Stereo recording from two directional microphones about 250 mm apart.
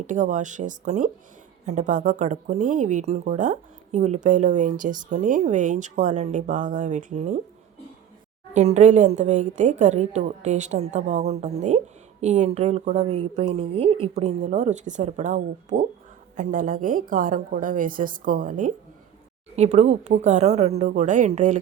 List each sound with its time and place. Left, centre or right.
0.1 s a woman's voice: right
8.5 s a woman's voice: right